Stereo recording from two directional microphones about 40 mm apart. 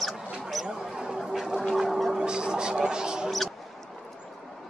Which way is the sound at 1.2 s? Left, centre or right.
Centre.